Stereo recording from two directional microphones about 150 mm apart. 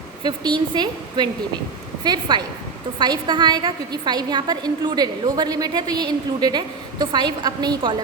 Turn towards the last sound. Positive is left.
turn(degrees=-25)  # may be behind; listen again after turning